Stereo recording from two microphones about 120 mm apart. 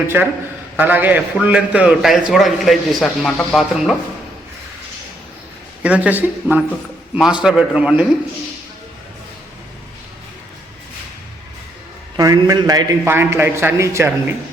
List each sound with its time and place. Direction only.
0.8 s a man's voice: 15° right (ahead or behind); by 3.9 s centre (ahead or behind)
5.8 s speech: 10° right (ahead or behind)
12.1 s a man's voice: 30° right (ahead or behind)
13.1 s speech: 20° right (ahead or behind)